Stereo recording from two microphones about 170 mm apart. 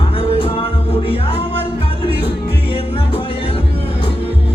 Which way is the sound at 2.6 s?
35° left (ahead or behind).